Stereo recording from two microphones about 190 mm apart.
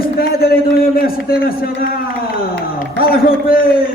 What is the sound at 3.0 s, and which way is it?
Speech, 50° left (ahead or behind).